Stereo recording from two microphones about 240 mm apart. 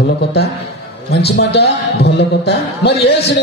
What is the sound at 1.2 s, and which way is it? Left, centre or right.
A man's voice, left.